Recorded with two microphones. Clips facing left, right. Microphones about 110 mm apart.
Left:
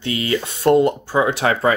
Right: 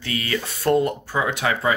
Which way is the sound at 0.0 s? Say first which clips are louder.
Left 5 dB; 25° left (ahead or behind).